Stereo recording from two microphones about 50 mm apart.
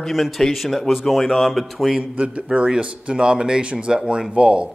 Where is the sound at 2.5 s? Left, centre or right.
Centre.